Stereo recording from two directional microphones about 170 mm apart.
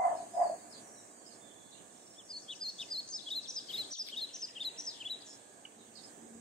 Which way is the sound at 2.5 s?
5° left (ahead or behind).